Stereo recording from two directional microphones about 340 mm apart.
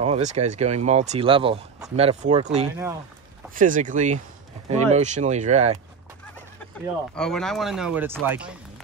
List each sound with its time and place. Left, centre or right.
0.0 s speech: centre
7.2 s speech: centre